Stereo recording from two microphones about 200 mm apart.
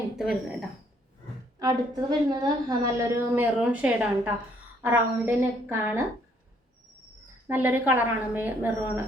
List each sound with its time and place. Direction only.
0.2 s speech: centre (ahead or behind)
1.5 s a woman's voice: 20° right (ahead or behind)
7.4 s a woman's voice: 10° right (ahead or behind)